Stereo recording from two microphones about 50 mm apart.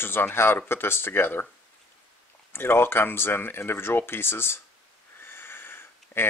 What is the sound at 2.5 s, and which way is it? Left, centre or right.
Speech, left.